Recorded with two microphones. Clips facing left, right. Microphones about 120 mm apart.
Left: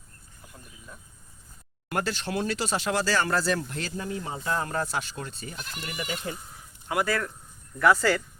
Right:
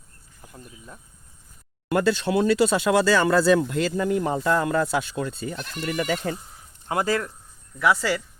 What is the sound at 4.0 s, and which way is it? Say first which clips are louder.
Speech: right 10 dB; 70° right (ahead or behind).